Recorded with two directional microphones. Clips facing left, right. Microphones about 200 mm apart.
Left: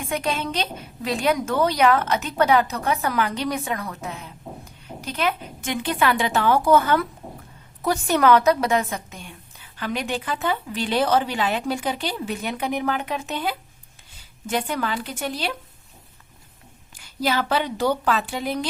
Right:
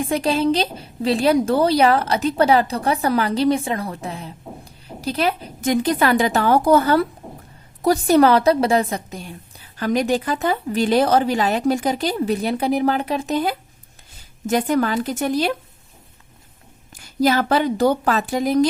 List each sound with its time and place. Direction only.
0.0 s a woman's voice: 30° right (ahead or behind)
16.9 s a woman's voice: 45° right (ahead or behind)